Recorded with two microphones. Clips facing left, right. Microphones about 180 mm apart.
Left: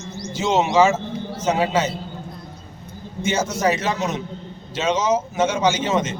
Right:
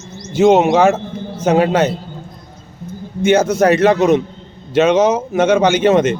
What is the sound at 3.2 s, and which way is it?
Speech, 60° right (ahead or behind).